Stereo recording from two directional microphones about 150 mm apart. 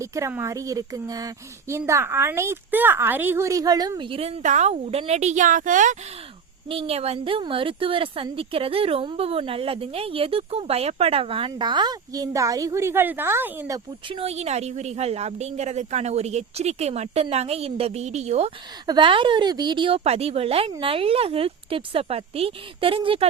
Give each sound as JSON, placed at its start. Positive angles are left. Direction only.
{"t": 0.0, "sound": "a woman's voice", "side_deg": -20}
{"t": 6.7, "sound": "speech", "side_deg": -40}
{"t": 14.1, "sound": "speech", "side_deg": -40}
{"t": 18.9, "sound": "speech", "side_deg": -35}